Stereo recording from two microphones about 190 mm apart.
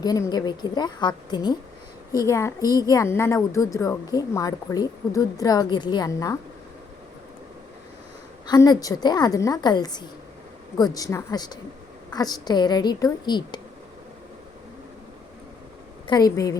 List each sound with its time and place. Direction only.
0.0 s a woman's voice: 20° left (ahead or behind)
8.4 s a woman's voice: 20° left (ahead or behind)
16.0 s a woman's voice: 20° left (ahead or behind)